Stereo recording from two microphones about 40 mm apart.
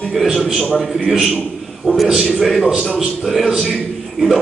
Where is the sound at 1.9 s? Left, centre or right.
Right.